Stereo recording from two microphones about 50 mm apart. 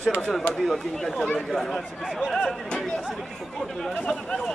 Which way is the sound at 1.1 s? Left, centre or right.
Left.